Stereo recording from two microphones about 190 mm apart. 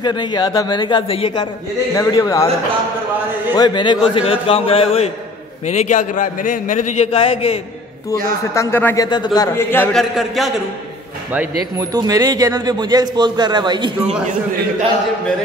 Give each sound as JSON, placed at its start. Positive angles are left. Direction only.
{"t": 0.0, "sound": "a man's voice", "side_deg": 20}
{"t": 3.5, "sound": "a man's voice", "side_deg": 25}
{"t": 8.5, "sound": "a man's voice", "side_deg": 10}
{"t": 10.1, "sound": "a man's voice", "side_deg": 0}
{"t": 11.9, "sound": "a man's voice", "side_deg": -20}